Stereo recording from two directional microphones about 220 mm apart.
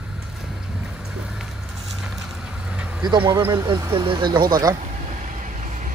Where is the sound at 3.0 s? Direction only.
15° right (ahead or behind).